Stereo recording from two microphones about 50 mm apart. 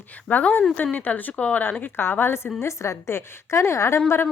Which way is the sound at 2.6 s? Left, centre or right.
Left.